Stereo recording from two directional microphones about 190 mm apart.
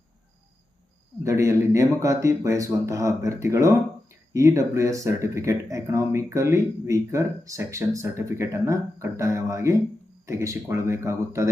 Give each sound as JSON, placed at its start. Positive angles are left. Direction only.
{"t": 1.2, "sound": "speech", "side_deg": -15}